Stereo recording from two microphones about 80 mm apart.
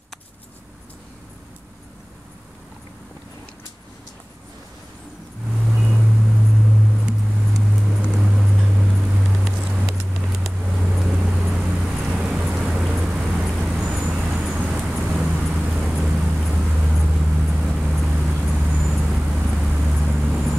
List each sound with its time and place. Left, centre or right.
5.9 s vehicle: centre